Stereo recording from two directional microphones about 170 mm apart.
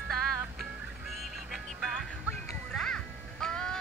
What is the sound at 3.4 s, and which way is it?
Music, 5° left (ahead or behind).